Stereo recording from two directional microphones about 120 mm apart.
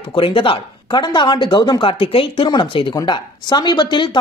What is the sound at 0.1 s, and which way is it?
Speech, 45° left (ahead or behind).